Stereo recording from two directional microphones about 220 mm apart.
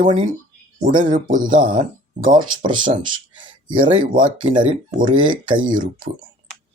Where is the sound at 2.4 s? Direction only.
20° right (ahead or behind).